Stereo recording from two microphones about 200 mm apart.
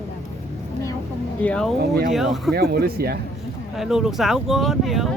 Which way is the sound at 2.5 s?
50° right (ahead or behind).